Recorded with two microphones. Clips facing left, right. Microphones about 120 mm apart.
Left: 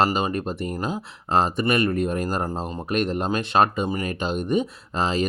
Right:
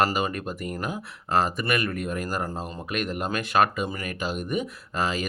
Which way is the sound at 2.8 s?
35° left (ahead or behind).